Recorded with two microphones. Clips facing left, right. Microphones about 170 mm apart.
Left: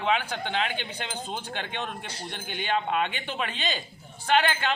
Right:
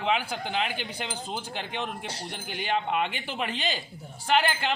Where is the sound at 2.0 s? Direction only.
75° right (ahead or behind).